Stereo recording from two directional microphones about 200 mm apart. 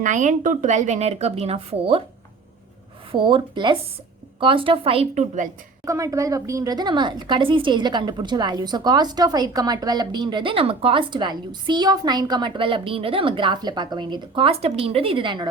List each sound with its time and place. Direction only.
0.0 s speech: 40° right (ahead or behind)
3.1 s a woman's voice: 25° right (ahead or behind)
5.8 s a woman's voice: 15° right (ahead or behind)